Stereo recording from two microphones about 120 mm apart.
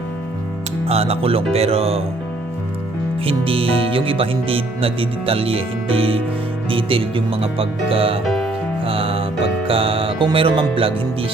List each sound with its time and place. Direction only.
0.9 s speech: 55° right (ahead or behind)
3.2 s speech: 50° right (ahead or behind)
8.2 s music: 5° left (ahead or behind)
8.8 s music: 50° right (ahead or behind)
9.6 s speech: 50° right (ahead or behind)